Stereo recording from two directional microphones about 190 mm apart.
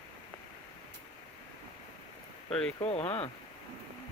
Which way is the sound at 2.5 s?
5° left (ahead or behind).